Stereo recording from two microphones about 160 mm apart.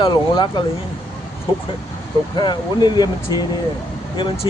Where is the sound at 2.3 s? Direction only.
30° left (ahead or behind).